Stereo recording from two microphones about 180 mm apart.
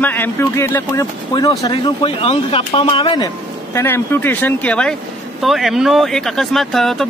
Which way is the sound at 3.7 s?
15° left (ahead or behind).